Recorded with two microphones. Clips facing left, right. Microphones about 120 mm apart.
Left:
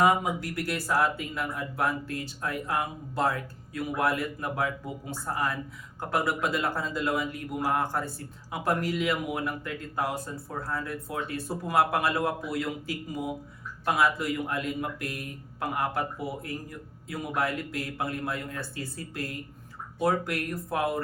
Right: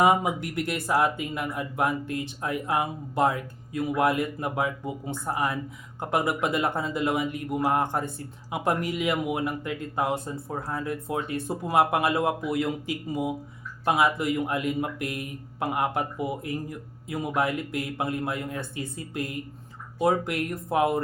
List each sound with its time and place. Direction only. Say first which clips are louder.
0.0 s speech: right 2 dB; 20° right (ahead or behind)